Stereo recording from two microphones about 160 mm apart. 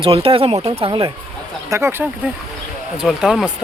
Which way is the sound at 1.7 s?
15° right (ahead or behind).